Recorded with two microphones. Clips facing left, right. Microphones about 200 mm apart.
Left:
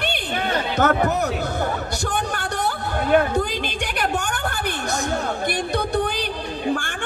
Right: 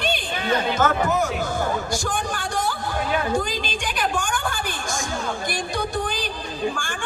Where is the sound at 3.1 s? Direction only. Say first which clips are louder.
Left 6 dB; 60° left (ahead or behind).